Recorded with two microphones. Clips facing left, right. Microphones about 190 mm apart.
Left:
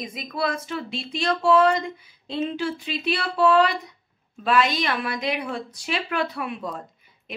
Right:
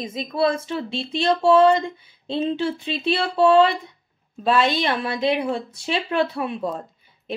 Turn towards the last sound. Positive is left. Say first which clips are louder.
# right 4 dB
turn(degrees=-25)  # may be behind; listen again after turning